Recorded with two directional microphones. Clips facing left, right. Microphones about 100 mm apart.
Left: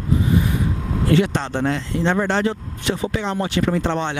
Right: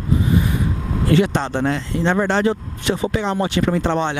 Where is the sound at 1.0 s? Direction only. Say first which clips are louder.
Right 1 dB; 15° right (ahead or behind).